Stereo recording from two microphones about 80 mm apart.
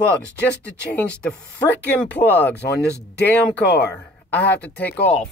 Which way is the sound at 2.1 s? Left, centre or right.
Left.